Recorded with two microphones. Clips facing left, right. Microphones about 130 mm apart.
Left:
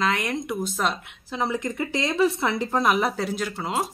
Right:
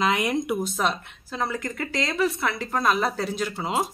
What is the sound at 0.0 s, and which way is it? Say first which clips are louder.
Speech: right 2 dB; 5° right (ahead or behind).